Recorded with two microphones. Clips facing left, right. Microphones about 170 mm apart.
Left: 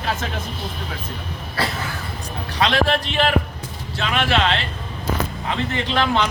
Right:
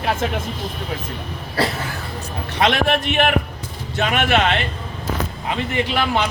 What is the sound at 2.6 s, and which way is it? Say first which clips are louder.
A man's voice: right 1 dB; 55° right (ahead or behind).